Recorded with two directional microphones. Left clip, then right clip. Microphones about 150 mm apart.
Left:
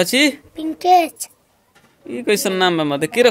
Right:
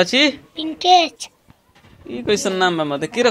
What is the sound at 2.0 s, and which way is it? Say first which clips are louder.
Speech: left 1 dB; 45° left (ahead or behind).